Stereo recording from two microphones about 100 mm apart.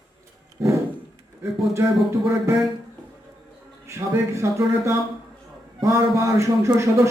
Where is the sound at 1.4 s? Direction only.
30° right (ahead or behind).